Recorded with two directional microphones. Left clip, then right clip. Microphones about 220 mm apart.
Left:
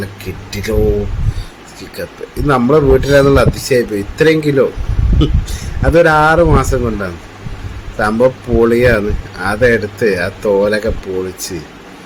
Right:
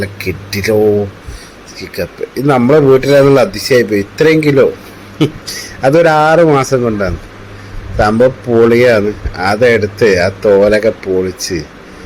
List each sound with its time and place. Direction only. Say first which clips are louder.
0.0 s a man's voice: right 7 dB; 15° right (ahead or behind)
2.0 s a man's voice: right 5 dB; 15° right (ahead or behind)
5.8 s a man's voice: right 1 dB; 15° right (ahead or behind)